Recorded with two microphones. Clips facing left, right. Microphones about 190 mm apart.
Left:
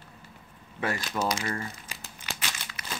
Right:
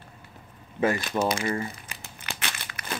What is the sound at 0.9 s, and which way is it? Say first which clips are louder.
Speech: right 4 dB; 55° right (ahead or behind).